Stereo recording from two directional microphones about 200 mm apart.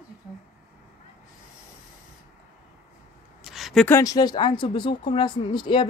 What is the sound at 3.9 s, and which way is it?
A woman's voice, 20° left (ahead or behind).